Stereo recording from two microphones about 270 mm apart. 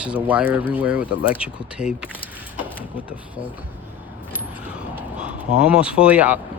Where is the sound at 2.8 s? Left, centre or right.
Centre.